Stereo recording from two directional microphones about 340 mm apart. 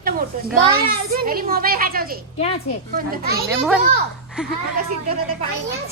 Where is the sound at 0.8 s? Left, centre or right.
Right.